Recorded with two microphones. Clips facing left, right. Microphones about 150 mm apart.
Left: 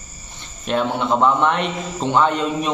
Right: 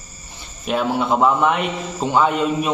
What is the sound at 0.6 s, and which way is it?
A man's voice, 5° right (ahead or behind).